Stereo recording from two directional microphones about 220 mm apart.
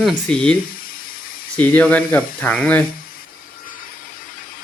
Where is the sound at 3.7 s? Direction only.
40° left (ahead or behind).